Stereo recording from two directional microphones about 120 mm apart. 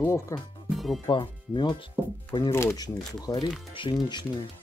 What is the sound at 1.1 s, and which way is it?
Speech, 40° left (ahead or behind).